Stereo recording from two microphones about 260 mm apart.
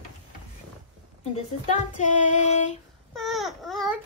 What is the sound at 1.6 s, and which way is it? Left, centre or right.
Child singing, left.